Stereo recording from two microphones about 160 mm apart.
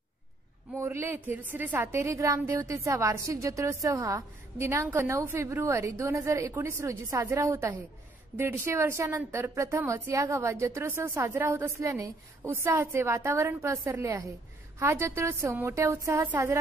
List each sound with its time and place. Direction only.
0.7 s a woman's voice: 15° right (ahead or behind)